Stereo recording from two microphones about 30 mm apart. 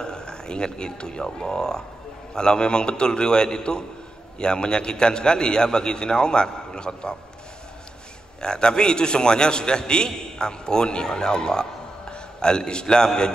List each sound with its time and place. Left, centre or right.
0.0 s a man's voice: left
8.4 s a man's voice: left